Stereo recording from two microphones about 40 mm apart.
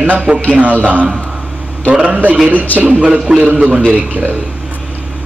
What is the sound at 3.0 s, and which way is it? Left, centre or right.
Speech, right.